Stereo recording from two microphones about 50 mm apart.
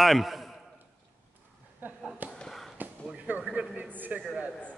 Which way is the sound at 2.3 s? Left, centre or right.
Centre.